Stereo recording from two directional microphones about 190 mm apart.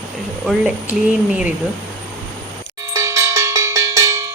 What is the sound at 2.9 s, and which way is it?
Cowbell, 15° right (ahead or behind).